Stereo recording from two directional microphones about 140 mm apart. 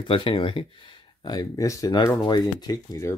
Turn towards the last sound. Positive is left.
turn(degrees=25)  # may be behind; listen again after turning